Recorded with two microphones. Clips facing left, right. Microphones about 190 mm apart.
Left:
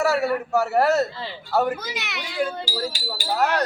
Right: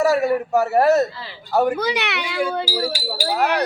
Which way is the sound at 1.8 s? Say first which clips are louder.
Right 10 dB; 65° right (ahead or behind).